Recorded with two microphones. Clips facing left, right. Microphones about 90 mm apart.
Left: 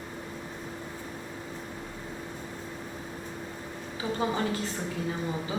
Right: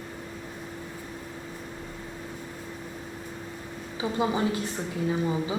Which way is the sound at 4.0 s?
15° right (ahead or behind).